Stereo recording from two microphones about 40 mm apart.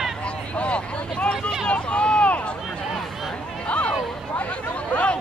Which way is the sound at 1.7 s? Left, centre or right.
Left.